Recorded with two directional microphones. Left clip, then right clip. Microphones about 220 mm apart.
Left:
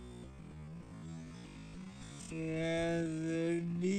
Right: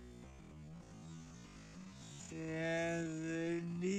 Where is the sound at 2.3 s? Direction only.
15° left (ahead or behind).